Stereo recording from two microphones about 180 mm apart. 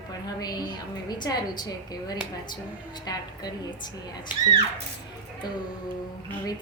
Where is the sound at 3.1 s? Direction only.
20° left (ahead or behind).